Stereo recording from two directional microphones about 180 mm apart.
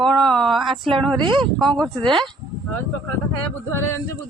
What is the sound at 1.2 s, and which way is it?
Speech, 25° right (ahead or behind).